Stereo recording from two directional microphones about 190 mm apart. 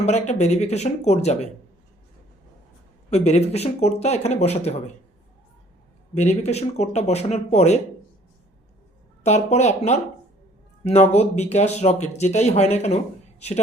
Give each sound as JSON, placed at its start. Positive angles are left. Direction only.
{"t": 0.0, "sound": "speech", "side_deg": 35}
{"t": 3.1, "sound": "speech", "side_deg": 35}
{"t": 6.1, "sound": "speech", "side_deg": 35}
{"t": 9.2, "sound": "speech", "side_deg": 35}